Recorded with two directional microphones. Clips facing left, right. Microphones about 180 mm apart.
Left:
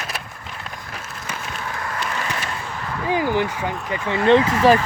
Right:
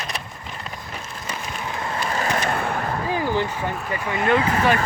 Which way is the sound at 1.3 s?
15° right (ahead or behind).